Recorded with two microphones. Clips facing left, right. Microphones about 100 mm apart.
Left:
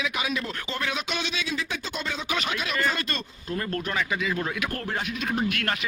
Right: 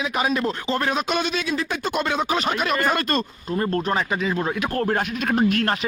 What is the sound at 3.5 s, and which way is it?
Speech, 30° right (ahead or behind).